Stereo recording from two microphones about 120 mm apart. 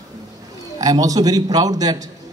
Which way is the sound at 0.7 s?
30° right (ahead or behind).